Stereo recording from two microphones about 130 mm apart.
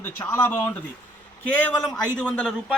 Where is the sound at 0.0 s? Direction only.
15° left (ahead or behind).